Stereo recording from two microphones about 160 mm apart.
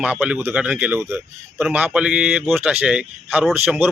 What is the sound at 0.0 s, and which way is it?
A man's voice, 5° right (ahead or behind).